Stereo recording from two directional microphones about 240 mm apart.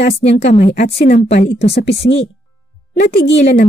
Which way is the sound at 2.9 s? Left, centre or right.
Left.